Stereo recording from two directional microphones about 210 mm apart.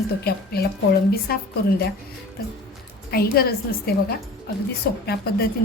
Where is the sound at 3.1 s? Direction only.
45° left (ahead or behind).